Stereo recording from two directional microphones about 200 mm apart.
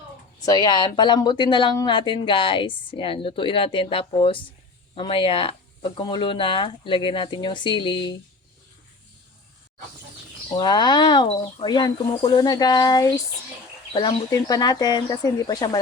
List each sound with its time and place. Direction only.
0.4 s speech: 20° left (ahead or behind)
10.5 s speech: 20° left (ahead or behind)